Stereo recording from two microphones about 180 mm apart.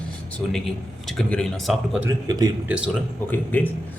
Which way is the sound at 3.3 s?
10° left (ahead or behind).